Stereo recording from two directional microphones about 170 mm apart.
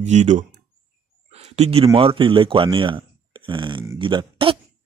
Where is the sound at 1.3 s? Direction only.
40° right (ahead or behind).